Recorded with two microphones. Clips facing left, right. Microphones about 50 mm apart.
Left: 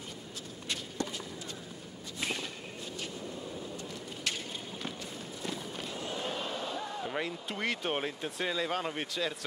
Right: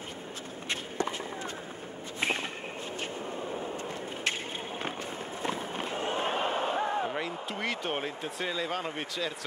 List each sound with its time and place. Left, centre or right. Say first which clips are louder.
0.7 s walk: right 4 dB; right
2.1 s whip: right 5 dB; right
5.4 s a sound: right 6 dB; right
7.1 s speech: right 2 dB; centre